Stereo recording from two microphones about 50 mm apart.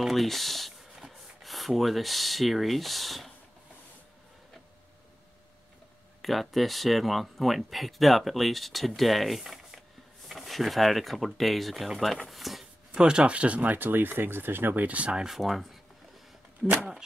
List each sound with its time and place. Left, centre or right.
0.0 s speech: centre
6.2 s speech: centre
12.9 s speech: centre
15.2 s speech: centre